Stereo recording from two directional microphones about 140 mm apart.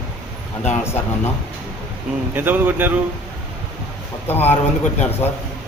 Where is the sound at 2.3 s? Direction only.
15° right (ahead or behind).